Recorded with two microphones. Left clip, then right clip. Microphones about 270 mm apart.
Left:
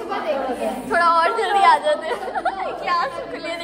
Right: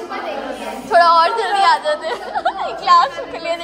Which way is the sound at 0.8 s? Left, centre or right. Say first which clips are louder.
Right 6 dB; centre.